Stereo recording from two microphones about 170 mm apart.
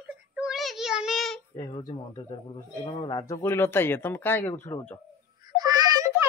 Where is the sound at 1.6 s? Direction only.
30° left (ahead or behind); by 5.0 s 15° left (ahead or behind).